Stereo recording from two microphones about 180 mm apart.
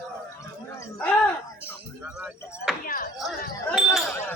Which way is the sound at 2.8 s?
55° left (ahead or behind).